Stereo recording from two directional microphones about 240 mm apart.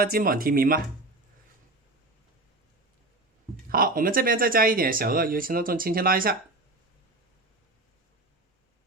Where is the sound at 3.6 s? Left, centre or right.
Right.